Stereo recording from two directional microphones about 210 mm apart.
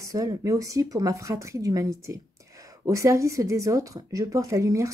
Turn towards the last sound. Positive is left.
turn(degrees=-15)  # may be behind; listen again after turning